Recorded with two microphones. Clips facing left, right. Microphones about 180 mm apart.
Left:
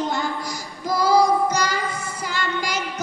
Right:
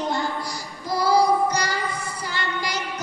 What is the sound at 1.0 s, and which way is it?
Child singing, 45° left (ahead or behind).